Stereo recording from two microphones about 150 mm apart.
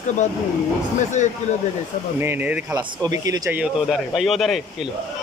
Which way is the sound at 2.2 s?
15° right (ahead or behind).